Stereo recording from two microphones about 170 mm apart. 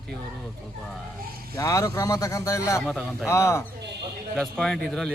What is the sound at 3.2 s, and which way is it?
Speech, 15° left (ahead or behind).